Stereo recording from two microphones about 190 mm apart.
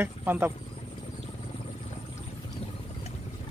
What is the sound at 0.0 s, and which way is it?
Speech, 10° right (ahead or behind).